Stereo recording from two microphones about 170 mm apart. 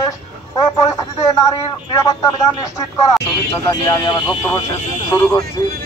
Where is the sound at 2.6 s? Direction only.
20° left (ahead or behind).